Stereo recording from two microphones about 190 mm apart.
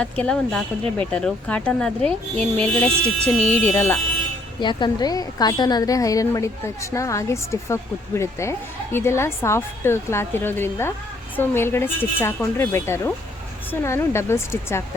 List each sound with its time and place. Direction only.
0.0 s speech: 5° left (ahead or behind)
4.6 s a woman's voice: 25° left (ahead or behind)